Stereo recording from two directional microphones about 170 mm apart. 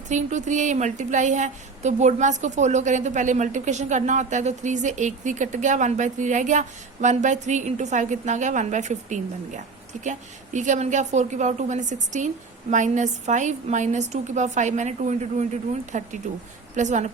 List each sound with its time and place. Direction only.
0.1 s speech: 45° right (ahead or behind)